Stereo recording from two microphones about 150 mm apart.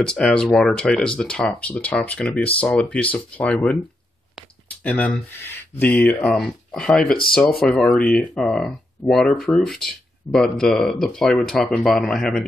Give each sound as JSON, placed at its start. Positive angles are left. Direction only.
{"t": 0.0, "sound": "speech", "side_deg": 5}
{"t": 4.4, "sound": "a sound", "side_deg": 10}
{"t": 5.8, "sound": "speech", "side_deg": 10}